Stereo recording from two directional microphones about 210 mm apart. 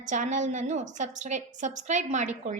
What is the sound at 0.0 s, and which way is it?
A woman's voice, 35° right (ahead or behind).